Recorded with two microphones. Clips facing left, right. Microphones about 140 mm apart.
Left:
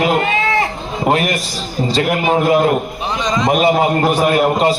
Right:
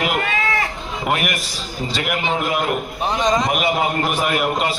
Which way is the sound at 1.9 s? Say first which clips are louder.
Left 7 dB; 35° left (ahead or behind).